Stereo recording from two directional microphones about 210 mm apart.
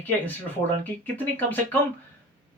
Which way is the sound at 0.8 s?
10° left (ahead or behind).